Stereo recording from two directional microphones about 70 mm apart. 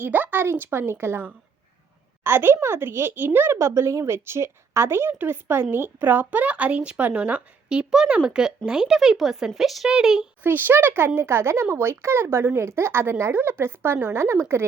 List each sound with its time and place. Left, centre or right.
0.0 s speech: right; by 10.2 s centre
10.4 s speech: right